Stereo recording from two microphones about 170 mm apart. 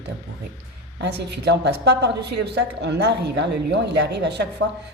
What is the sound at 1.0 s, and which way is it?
A woman's voice, 90° right.